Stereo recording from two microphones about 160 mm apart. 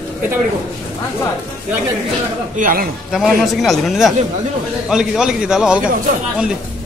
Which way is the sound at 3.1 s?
Centre (ahead or behind).